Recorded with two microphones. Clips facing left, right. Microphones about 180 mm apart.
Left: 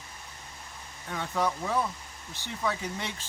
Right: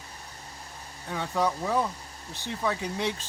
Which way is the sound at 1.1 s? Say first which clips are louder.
Right 2 dB; 15° right (ahead or behind).